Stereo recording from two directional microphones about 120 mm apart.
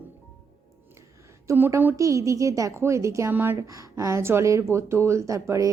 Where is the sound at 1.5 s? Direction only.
20° right (ahead or behind).